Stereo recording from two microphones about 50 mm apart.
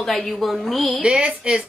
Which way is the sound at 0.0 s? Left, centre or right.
Centre.